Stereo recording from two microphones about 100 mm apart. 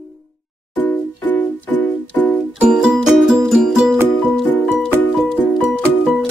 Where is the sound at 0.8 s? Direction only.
15° left (ahead or behind).